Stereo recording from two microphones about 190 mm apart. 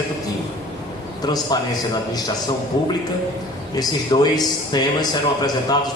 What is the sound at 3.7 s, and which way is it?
A man's voice, 20° left (ahead or behind).